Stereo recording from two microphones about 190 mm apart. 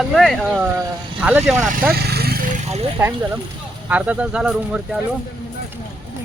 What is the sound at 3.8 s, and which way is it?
Speech, 10° right (ahead or behind).